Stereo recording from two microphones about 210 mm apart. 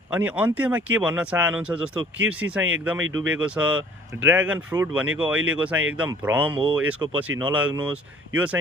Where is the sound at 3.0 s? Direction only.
70° right (ahead or behind).